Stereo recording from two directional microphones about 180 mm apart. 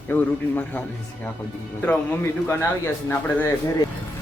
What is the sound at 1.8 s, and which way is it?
A man's voice, 10° left (ahead or behind).